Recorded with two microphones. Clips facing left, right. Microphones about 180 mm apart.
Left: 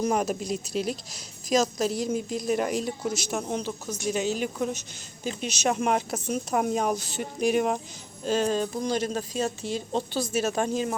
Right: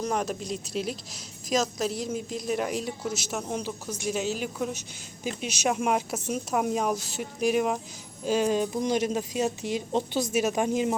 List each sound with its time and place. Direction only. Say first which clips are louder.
0.0 s a woman's voice: left 3 dB; 5° left (ahead or behind); by 10.9 s 20° right (ahead or behind)